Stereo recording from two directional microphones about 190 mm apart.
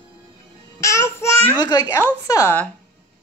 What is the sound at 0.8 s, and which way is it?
Speech, 15° left (ahead or behind).